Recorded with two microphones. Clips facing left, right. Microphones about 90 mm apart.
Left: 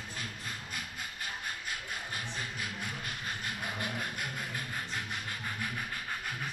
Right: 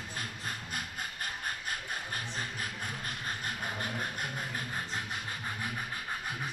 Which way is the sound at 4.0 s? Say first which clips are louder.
Right 1 dB; 35° right (ahead or behind).